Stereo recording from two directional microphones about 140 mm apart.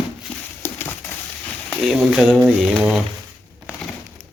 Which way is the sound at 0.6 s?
15° left (ahead or behind).